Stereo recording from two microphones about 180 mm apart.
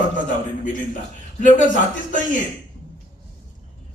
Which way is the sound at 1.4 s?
45° left (ahead or behind).